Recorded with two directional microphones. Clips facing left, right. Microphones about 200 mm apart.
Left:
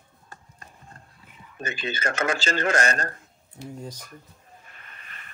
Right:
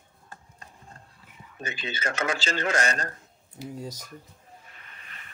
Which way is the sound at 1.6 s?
50° left (ahead or behind).